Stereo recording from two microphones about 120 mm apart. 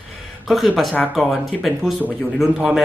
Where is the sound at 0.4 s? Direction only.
Centre (ahead or behind).